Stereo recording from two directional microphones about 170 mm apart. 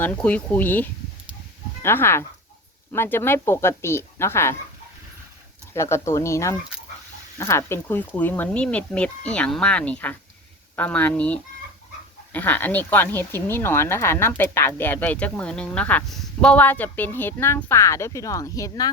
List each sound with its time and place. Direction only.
0.0 s speech: 10° left (ahead or behind)
5.7 s speech: 15° left (ahead or behind)